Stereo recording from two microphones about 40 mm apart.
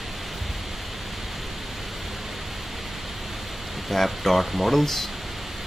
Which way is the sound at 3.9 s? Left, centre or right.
Centre.